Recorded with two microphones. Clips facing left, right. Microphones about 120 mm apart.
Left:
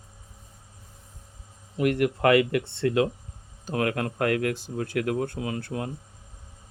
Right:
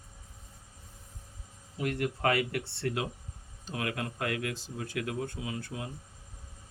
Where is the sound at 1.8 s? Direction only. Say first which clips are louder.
Left 8 dB; 90° left.